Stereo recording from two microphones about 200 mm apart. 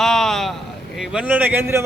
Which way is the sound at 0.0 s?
Centre (ahead or behind).